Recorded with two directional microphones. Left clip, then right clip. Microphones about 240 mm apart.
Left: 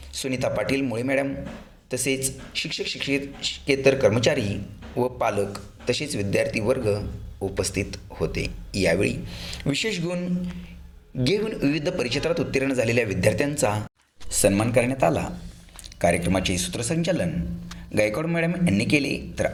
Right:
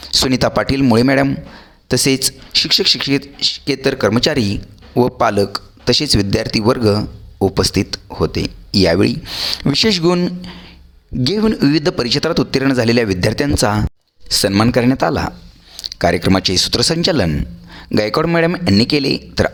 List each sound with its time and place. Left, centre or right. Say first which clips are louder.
0.0 s a man's voice: right 12 dB; right